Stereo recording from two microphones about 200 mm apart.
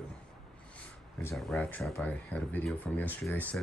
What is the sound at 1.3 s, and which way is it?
Speech, 5° left (ahead or behind).